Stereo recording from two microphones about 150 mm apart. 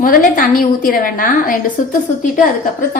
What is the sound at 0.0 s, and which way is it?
A woman's voice, 65° left (ahead or behind).